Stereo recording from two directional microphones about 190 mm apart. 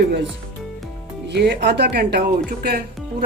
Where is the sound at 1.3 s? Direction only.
65° right (ahead or behind).